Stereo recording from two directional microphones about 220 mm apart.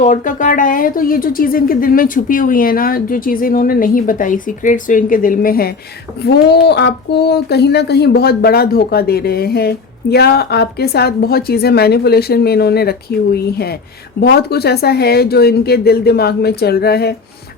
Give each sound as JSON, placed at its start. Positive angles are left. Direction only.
{"t": 0.0, "sound": "speech", "side_deg": 35}